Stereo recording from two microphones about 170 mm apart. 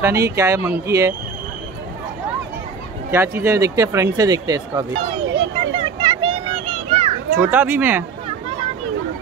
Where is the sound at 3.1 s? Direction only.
15° right (ahead or behind).